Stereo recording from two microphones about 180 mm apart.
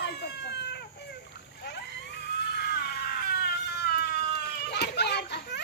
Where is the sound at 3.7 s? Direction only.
65° left (ahead or behind).